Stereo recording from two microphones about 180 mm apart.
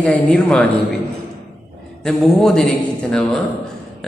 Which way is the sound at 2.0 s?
Centre (ahead or behind).